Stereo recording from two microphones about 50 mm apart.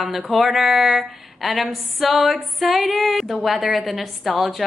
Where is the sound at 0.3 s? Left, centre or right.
Centre.